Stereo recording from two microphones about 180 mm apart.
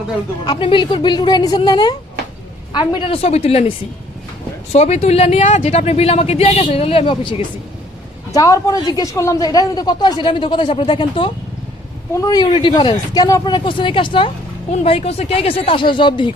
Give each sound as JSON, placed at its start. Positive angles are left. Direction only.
{"t": 0.4, "sound": "a man's voice", "side_deg": 25}
{"t": 4.7, "sound": "a man's voice", "side_deg": 35}